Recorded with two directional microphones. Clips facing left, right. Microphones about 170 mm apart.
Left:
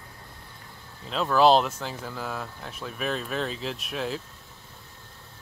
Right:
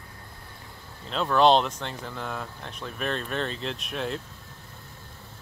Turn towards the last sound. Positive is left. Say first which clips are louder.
# even
turn(degrees=0)  # may be behind; listen again after turning